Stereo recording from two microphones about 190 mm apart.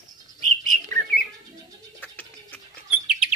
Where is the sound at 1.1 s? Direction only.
50° left (ahead or behind).